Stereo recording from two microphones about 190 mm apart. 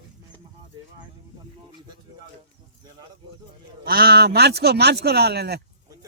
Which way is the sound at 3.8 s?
55° right (ahead or behind).